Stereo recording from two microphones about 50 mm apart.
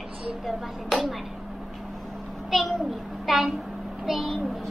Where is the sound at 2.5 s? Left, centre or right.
Centre.